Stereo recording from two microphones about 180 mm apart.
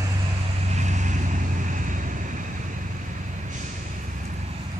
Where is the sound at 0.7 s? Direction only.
40° right (ahead or behind).